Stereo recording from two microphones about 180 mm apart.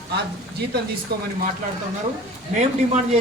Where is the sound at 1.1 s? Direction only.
60° right (ahead or behind).